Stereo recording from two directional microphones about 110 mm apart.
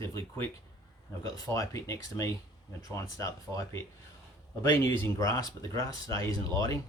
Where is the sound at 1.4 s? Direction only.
30° left (ahead or behind).